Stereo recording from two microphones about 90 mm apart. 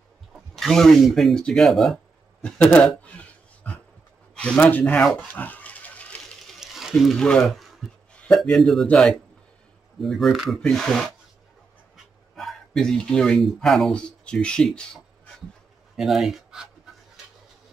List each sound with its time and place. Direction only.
0.6 s speech: centre (ahead or behind); by 5.0 s 20° left (ahead or behind)
5.1 s dog: 20° left (ahead or behind)
6.6 s frying: 5° right (ahead or behind)
7.2 s speech: 10° left (ahead or behind)
12.4 s speech: 5° left (ahead or behind)
16.0 s speech: 5° right (ahead or behind)